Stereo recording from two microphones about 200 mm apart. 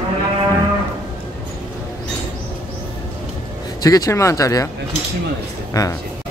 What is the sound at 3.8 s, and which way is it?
Speech, 15° left (ahead or behind).